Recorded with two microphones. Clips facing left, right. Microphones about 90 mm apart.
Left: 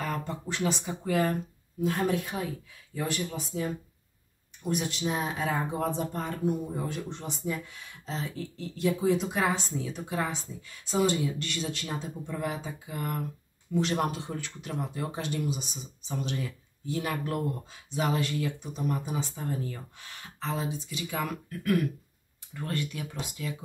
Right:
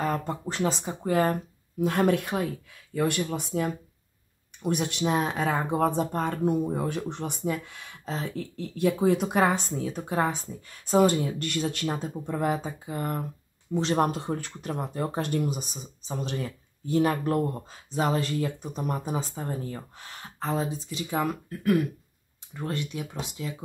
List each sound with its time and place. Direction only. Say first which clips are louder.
0.0 s speech: right 5 dB; 40° right (ahead or behind)
1.8 s speech: right 4 dB; 60° right (ahead or behind); by 14.0 s 30° right (ahead or behind)
14.0 s speech: right 4 dB; 40° right (ahead or behind); by 23.5 s 25° right (ahead or behind)